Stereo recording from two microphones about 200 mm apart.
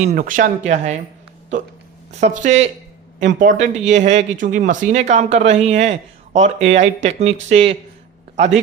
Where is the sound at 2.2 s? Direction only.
35° right (ahead or behind).